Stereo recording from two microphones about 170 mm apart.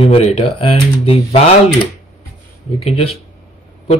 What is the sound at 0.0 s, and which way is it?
Speech, 35° left (ahead or behind).